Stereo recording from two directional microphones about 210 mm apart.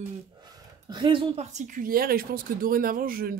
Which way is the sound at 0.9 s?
25° right (ahead or behind).